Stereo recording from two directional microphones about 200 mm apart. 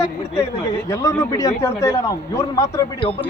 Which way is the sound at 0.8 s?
15° left (ahead or behind).